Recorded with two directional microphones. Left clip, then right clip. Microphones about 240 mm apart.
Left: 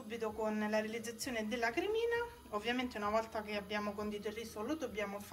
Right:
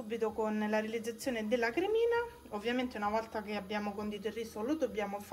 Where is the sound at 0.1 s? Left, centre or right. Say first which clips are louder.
Right 4 dB; left.